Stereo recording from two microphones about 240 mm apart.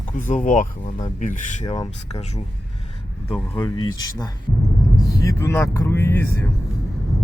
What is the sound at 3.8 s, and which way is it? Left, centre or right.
Speech, centre.